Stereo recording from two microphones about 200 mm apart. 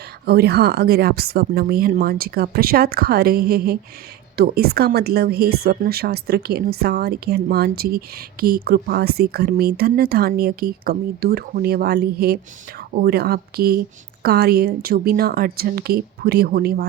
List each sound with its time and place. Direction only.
0.3 s a woman's voice: 55° right (ahead or behind)